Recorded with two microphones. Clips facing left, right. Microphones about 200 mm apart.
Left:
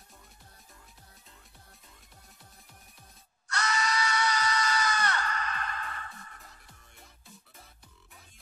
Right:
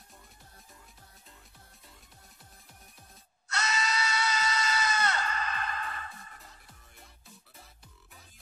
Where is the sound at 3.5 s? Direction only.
25° right (ahead or behind).